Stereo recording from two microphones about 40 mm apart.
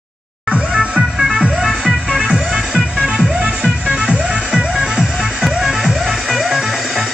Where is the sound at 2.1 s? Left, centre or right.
Right.